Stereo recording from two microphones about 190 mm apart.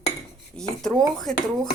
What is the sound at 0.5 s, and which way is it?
Speech, 5° left (ahead or behind).